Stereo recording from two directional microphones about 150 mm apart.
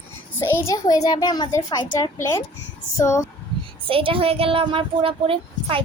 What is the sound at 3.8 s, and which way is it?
A woman's voice, 35° right (ahead or behind).